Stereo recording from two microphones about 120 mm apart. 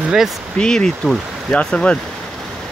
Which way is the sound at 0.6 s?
5° left (ahead or behind).